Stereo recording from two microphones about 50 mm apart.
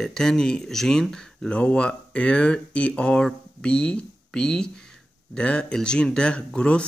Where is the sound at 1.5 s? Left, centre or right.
Left.